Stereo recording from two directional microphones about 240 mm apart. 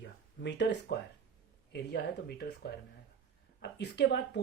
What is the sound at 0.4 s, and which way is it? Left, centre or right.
Speech, left.